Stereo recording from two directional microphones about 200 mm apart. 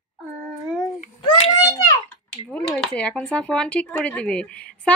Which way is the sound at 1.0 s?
35° left (ahead or behind).